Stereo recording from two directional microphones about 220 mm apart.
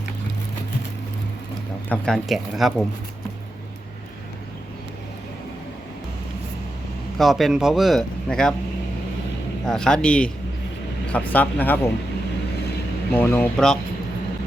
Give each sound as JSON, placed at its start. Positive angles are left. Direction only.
{"t": 1.9, "sound": "speech", "side_deg": 0}
{"t": 7.2, "sound": "speech", "side_deg": 0}
{"t": 9.6, "sound": "speech", "side_deg": 5}
{"t": 13.1, "sound": "speech", "side_deg": 10}